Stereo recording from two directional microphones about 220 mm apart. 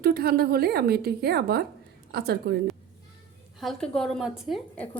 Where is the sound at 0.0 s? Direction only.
45° right (ahead or behind).